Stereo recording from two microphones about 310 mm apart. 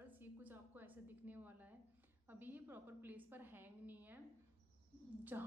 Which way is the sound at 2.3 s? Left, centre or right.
Centre.